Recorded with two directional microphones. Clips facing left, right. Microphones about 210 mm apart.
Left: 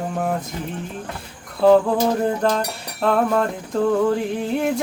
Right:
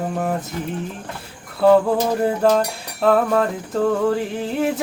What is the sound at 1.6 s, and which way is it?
Cutlery, 5° right (ahead or behind).